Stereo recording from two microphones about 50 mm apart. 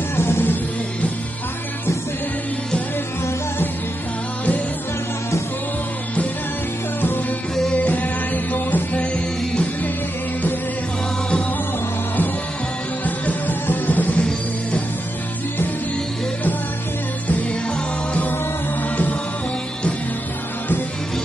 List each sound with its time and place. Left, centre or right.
0.1 s music: left
7.7 s music: left
13.0 s music: left
18.8 s music: left